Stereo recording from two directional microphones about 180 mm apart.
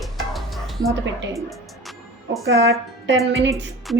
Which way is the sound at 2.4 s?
85° right.